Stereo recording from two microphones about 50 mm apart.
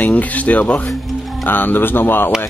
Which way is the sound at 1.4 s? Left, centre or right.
Left.